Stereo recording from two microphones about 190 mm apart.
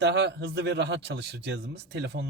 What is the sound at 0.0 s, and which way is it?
A man's voice, 65° right (ahead or behind).